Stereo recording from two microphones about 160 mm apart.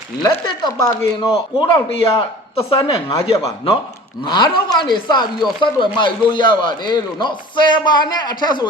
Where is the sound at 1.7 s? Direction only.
35° left (ahead or behind).